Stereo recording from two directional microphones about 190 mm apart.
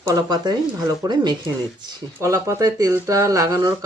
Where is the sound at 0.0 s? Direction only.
20° right (ahead or behind).